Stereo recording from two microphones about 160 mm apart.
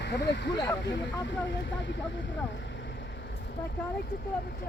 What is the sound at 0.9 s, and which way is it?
Speech, 90° left.